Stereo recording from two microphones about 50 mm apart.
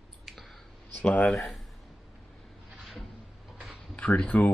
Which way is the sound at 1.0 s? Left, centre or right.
Left.